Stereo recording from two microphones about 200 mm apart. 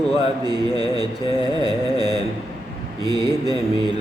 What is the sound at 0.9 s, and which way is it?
Mantra, 20° right (ahead or behind).